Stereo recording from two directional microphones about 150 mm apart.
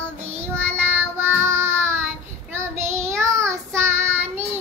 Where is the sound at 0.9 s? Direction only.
15° right (ahead or behind).